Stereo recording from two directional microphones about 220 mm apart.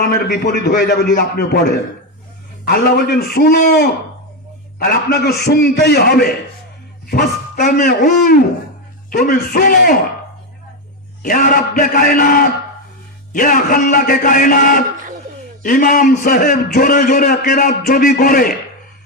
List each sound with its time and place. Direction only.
0.0 s a man's voice: 45° left (ahead or behind)
4.9 s a man's voice: 45° left (ahead or behind)
11.2 s a man's voice: 40° left (ahead or behind)